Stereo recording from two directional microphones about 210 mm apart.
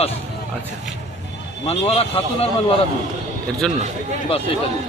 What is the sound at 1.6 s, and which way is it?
Speech, 30° left (ahead or behind).